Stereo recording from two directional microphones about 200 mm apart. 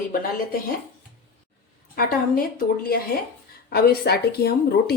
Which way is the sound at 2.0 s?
45° left (ahead or behind).